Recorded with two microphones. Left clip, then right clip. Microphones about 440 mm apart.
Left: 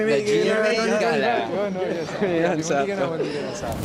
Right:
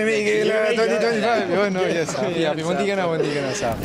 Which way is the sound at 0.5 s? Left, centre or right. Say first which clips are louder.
Right 2 dB; right.